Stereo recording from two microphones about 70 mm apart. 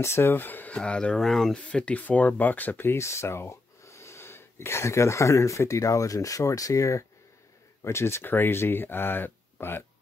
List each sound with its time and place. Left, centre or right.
0.0 s speech: left
0.7 s speech: centre
1.7 s speech: centre